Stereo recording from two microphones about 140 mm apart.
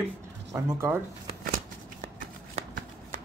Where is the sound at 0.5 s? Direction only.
20° right (ahead or behind).